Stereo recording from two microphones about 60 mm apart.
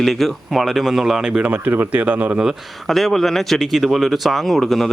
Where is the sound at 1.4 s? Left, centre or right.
Right.